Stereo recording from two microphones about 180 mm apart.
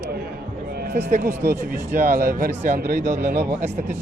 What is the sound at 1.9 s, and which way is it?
Speech, 50° right (ahead or behind).